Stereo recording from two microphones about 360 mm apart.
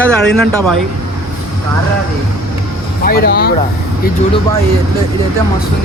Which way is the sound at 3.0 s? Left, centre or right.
Left.